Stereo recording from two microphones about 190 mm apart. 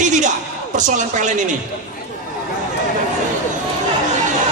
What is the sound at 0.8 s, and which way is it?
Speech, 40° right (ahead or behind).